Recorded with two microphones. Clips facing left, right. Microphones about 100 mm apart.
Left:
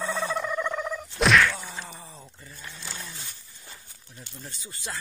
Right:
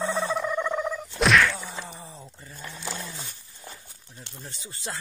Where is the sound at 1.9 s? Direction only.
20° right (ahead or behind).